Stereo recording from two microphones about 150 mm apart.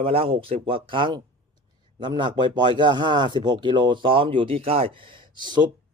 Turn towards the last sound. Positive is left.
turn(degrees=-30)  # may be behind; listen again after turning